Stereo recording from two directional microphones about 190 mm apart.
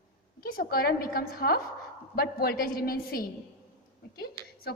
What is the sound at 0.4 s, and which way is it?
A woman's voice, 50° left (ahead or behind).